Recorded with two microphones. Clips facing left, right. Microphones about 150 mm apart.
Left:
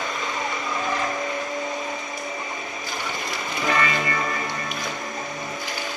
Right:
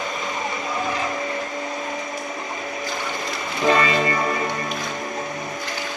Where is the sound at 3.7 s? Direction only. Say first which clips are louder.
Right 5 dB; 25° right (ahead or behind).